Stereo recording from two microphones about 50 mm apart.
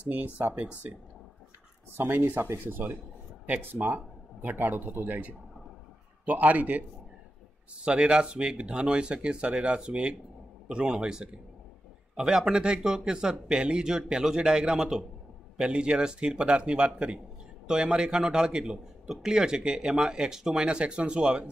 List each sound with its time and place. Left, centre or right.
0.1 s speech: right
2.1 s speech: right
2.4 s speech: right
3.8 s speech: right
7.7 s a man's voice: right
14.8 s a man's voice: centre
15.6 s a man's voice: centre
20.6 s speech: right